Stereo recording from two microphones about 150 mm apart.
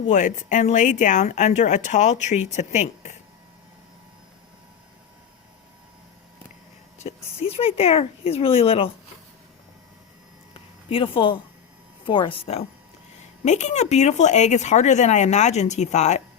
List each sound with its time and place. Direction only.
0.1 s speech: 55° left (ahead or behind)
7.0 s speech: 40° left (ahead or behind)
10.8 s speech: 35° left (ahead or behind)
13.4 s speech: 50° left (ahead or behind)